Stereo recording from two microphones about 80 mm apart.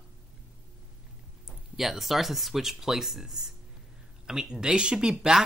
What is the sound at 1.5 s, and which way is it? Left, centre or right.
Speech, centre.